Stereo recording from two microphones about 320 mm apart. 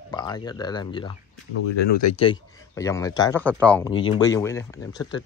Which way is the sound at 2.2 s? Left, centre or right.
Centre.